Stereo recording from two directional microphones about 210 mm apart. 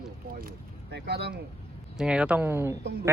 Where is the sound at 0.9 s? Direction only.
50° right (ahead or behind).